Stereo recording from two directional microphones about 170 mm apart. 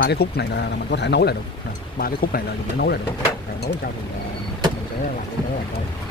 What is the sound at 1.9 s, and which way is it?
Speech, 60° left (ahead or behind).